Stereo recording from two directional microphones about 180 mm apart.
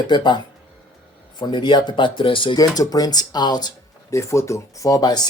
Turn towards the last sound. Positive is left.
turn(degrees=20)  # may be behind; listen again after turning